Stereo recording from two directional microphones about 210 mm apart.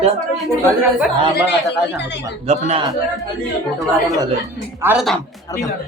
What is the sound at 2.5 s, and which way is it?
Speech, 30° right (ahead or behind).